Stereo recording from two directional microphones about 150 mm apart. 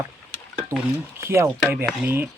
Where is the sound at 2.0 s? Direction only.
15° right (ahead or behind).